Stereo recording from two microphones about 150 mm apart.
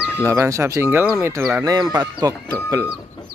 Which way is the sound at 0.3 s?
20° right (ahead or behind).